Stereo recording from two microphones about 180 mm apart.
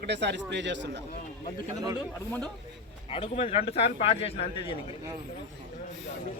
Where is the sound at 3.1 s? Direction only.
30° left (ahead or behind).